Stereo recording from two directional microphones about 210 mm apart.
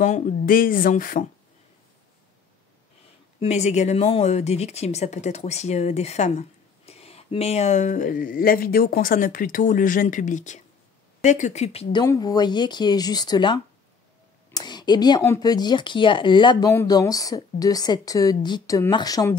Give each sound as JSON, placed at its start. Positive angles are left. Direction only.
{"t": 0.0, "sound": "speech", "side_deg": 35}
{"t": 3.3, "sound": "speech", "side_deg": 30}